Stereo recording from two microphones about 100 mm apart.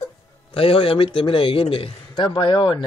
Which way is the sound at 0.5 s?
65° left (ahead or behind).